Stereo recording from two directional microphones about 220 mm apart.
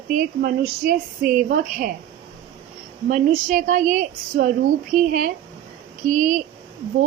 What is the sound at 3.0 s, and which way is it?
A woman's voice, 35° right (ahead or behind).